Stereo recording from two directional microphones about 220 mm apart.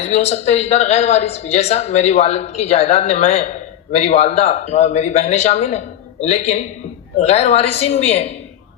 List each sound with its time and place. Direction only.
0.0 s a man's voice: 30° left (ahead or behind)